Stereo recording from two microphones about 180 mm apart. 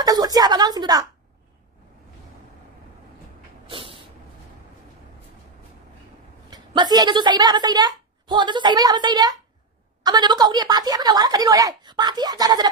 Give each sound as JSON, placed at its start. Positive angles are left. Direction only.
{"t": 0.0, "sound": "a woman's voice", "side_deg": -20}
{"t": 3.6, "sound": "vehicle", "side_deg": -30}
{"t": 6.5, "sound": "a woman's voice", "side_deg": -25}